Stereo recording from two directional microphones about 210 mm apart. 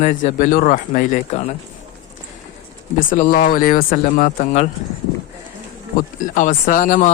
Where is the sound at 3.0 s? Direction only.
40° left (ahead or behind).